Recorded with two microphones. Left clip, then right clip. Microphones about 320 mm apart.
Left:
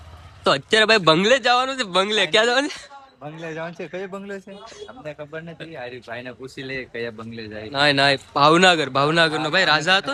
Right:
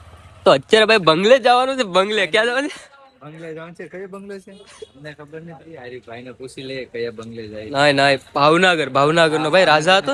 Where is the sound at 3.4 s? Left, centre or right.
Left.